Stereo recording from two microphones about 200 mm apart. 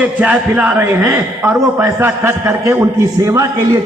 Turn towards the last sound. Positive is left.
turn(degrees=-15)  # may be behind; listen again after turning